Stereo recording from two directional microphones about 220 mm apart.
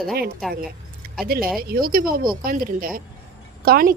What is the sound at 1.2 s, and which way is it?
Speech, 45° right (ahead or behind).